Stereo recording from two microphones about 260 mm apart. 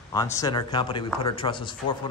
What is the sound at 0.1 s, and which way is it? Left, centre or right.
A man's voice, centre.